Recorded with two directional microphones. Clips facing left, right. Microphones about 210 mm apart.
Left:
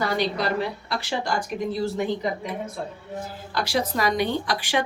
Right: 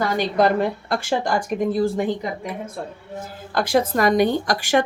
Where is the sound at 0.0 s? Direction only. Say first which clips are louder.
Right 5 dB; 50° right (ahead or behind).